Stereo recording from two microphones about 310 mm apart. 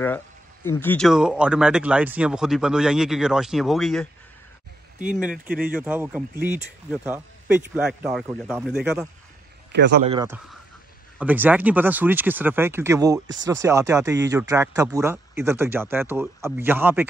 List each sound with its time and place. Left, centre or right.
0.7 s speech: centre
9.7 s a man's voice: right
10.0 s speech: centre